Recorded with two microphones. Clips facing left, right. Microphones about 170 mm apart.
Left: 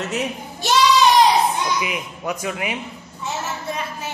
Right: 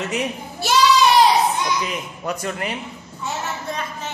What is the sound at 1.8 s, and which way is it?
A man's voice, 5° left (ahead or behind).